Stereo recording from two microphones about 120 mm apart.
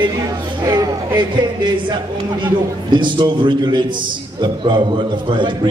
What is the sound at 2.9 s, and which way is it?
A man's voice, 40° right (ahead or behind).